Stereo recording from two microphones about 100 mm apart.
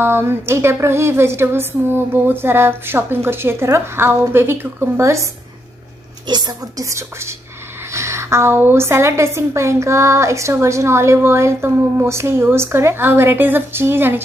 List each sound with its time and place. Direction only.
0.0 s a woman's voice: 25° right (ahead or behind)
6.2 s a woman's voice: 45° right (ahead or behind)
6.9 s a woman's voice: 30° right (ahead or behind)